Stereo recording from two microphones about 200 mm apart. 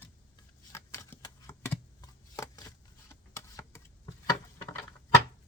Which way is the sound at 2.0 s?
20° left (ahead or behind).